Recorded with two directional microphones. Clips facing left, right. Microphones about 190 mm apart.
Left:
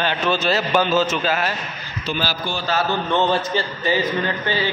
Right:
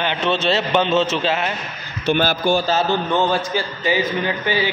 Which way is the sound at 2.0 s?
55° right (ahead or behind).